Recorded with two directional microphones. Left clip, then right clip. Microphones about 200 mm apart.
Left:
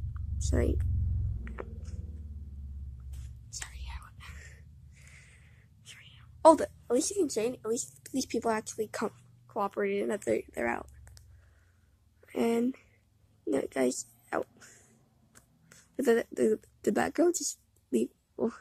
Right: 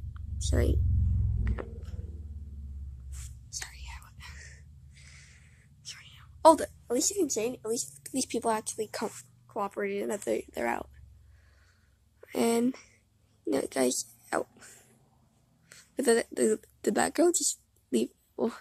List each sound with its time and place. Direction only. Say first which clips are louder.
0.1 s a sound: right 1 dB; 15° right (ahead or behind)
1.4 s music: right 2 dB; 15° right (ahead or behind)
3.4 s whispering: right 2 dB; 15° right (ahead or behind)
12.2 s speech: right 2 dB; 20° right (ahead or behind)